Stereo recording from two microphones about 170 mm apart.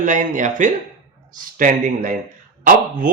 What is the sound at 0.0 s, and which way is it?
A man's voice, 50° right (ahead or behind).